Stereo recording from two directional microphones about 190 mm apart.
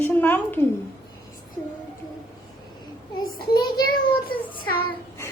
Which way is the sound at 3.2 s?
55° left (ahead or behind).